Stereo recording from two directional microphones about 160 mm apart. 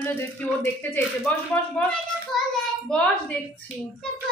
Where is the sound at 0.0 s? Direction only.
10° left (ahead or behind).